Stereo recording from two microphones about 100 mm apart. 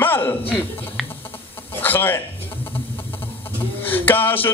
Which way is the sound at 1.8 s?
20° left (ahead or behind).